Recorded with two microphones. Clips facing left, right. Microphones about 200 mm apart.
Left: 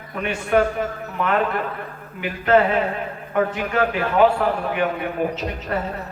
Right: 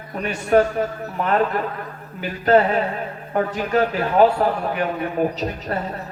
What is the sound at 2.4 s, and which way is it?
A man's voice, 40° right (ahead or behind).